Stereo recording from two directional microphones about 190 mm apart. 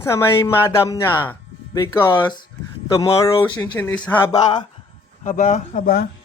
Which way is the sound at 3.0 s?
30° left (ahead or behind).